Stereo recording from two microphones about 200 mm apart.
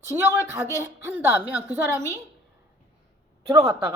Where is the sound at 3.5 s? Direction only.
15° right (ahead or behind).